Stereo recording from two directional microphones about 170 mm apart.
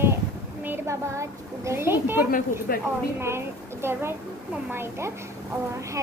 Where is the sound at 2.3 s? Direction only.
55° left (ahead or behind).